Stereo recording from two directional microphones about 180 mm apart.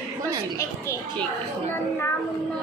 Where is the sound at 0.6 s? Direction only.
15° left (ahead or behind).